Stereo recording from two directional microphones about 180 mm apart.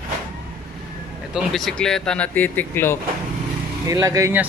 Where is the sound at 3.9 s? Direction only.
20° right (ahead or behind).